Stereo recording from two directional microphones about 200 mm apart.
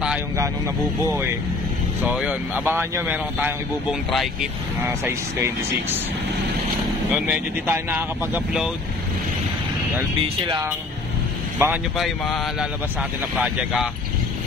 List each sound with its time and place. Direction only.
2.0 s speech: 5° right (ahead or behind)
4.8 s speech: 10° right (ahead or behind)
7.2 s speech: 10° right (ahead or behind)
10.2 s speech: 25° right (ahead or behind)
11.5 s speech: 10° right (ahead or behind)
12.0 s speech: centre (ahead or behind)